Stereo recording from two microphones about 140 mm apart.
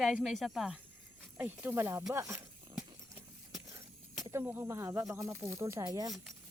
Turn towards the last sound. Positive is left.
turn(degrees=-25)  # may be behind; listen again after turning